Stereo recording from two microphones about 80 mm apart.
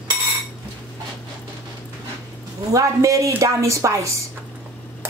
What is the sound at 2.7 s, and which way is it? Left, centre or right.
A man's voice, right.